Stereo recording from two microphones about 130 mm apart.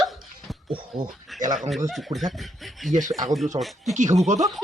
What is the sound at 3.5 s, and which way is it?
Speech, 40° right (ahead or behind).